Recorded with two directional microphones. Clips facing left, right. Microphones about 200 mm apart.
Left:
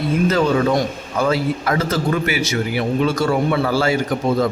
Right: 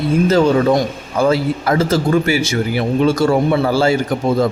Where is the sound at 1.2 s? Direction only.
30° right (ahead or behind).